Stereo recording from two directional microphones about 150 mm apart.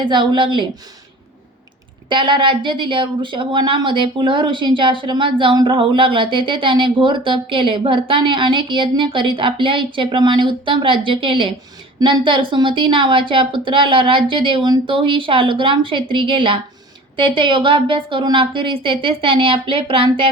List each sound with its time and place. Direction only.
0.0 s a woman's voice: 30° right (ahead or behind)
2.0 s a woman's voice: 35° right (ahead or behind)